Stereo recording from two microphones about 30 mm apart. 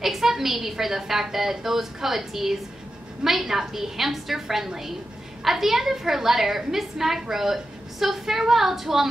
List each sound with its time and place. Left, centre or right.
0.0 s a woman's voice: centre